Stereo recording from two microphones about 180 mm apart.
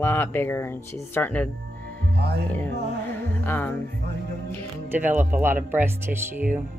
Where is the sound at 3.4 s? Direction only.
10° left (ahead or behind).